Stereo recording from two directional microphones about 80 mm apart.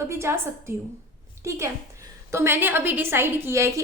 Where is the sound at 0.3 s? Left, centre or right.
Right.